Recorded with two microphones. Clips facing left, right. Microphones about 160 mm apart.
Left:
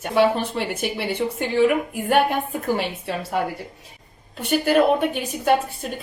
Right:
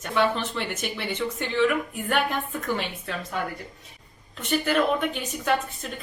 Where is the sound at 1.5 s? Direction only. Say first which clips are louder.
Left 5 dB; 45° left (ahead or behind).